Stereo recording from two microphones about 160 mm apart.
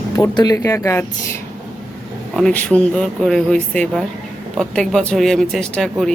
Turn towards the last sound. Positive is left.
turn(degrees=5)  # may be behind; listen again after turning